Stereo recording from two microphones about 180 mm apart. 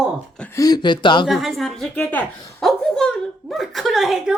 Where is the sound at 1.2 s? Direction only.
Centre (ahead or behind).